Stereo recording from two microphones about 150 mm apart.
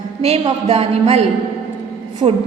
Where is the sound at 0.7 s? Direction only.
45° right (ahead or behind).